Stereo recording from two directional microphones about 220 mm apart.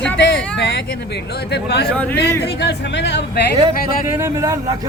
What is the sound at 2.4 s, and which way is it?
Speech, 50° left (ahead or behind).